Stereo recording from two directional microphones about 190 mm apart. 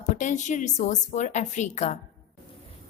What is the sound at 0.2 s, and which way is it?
A woman's voice, 40° left (ahead or behind).